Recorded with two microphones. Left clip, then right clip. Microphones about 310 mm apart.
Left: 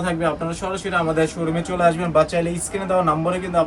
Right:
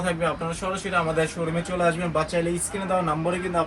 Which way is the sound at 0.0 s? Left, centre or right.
Centre.